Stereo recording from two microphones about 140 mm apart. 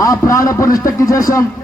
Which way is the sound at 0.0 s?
25° left (ahead or behind).